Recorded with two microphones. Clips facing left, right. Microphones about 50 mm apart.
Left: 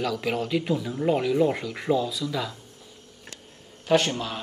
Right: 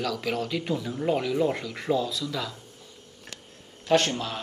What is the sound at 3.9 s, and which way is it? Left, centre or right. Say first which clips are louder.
Speech: left 1 dB; centre.